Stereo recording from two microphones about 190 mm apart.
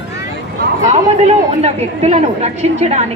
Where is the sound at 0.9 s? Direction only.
35° right (ahead or behind).